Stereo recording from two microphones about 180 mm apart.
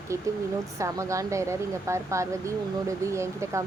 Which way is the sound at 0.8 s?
15° right (ahead or behind).